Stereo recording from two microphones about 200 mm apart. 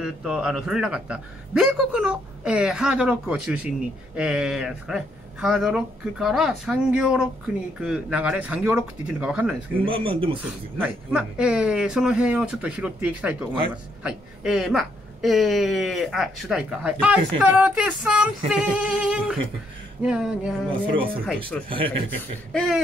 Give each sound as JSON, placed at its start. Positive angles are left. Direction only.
{"t": 0.0, "sound": "a woman's voice", "side_deg": -5}
{"t": 9.8, "sound": "speech", "side_deg": -25}
{"t": 10.4, "sound": "a woman's voice", "side_deg": -10}